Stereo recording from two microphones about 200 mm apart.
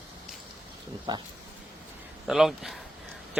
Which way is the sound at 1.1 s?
20° right (ahead or behind).